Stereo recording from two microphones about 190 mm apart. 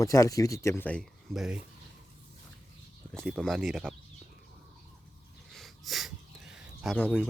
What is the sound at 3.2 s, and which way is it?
Speech, centre (ahead or behind).